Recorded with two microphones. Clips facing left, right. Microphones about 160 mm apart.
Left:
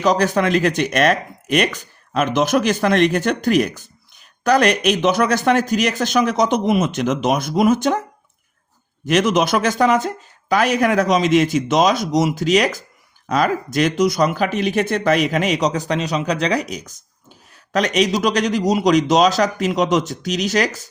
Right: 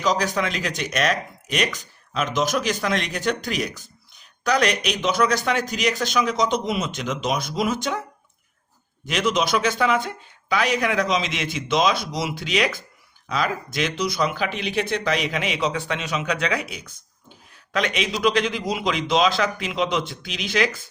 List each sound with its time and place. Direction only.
0.0 s speech: 55° left (ahead or behind)
9.0 s speech: 50° left (ahead or behind)